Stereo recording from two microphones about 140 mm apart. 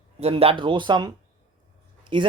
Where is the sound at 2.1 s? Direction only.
35° right (ahead or behind).